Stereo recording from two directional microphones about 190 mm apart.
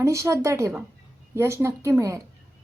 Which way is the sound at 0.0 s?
15° right (ahead or behind).